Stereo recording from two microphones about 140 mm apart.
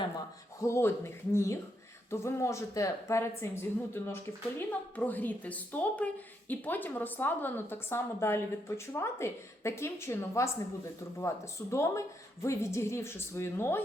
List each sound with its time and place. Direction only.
0.6 s a woman's voice: 20° left (ahead or behind)